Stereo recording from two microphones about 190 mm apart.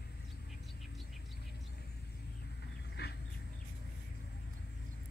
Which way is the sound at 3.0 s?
55° left (ahead or behind).